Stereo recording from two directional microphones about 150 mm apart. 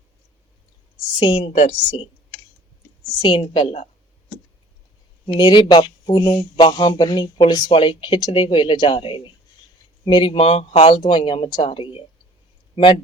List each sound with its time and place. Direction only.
1.2 s a woman's voice: 35° left (ahead or behind)
3.2 s speech: 35° left (ahead or behind)
5.4 s speech: 30° left (ahead or behind)